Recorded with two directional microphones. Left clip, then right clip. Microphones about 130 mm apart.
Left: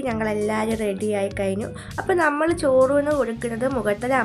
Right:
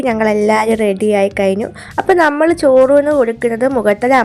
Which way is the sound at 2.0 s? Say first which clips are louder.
Right 9 dB; 65° right (ahead or behind).